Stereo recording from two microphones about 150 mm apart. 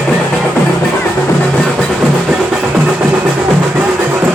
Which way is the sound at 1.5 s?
5° left (ahead or behind).